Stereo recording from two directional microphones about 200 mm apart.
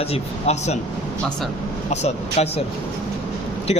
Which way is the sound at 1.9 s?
35° left (ahead or behind).